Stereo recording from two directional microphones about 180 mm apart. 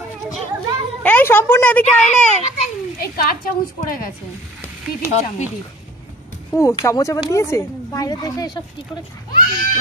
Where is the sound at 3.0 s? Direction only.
55° left (ahead or behind).